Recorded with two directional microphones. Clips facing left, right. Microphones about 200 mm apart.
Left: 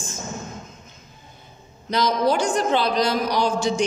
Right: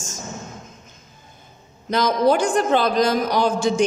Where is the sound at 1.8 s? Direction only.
50° right (ahead or behind).